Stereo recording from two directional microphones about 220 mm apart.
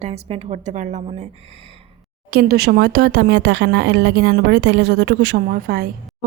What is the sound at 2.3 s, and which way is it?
Speech, 45° right (ahead or behind).